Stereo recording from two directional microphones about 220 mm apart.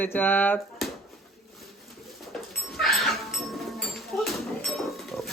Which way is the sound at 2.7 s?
Centre (ahead or behind).